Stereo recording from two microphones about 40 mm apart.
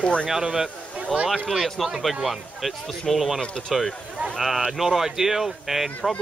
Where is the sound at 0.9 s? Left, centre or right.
Right.